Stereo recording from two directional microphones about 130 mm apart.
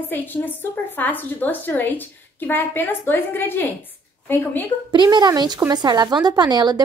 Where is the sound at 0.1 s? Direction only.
15° left (ahead or behind).